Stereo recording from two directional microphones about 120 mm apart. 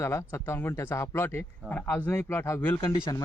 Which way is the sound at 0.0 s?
20° left (ahead or behind).